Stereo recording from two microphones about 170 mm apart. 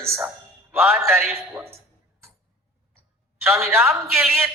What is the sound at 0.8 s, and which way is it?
Speech, centre (ahead or behind).